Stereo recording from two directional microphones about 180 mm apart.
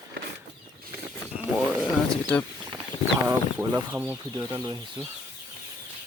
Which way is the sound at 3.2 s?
15° right (ahead or behind).